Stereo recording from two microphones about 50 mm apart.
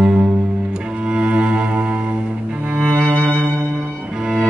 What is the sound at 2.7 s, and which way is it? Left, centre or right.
Music, right.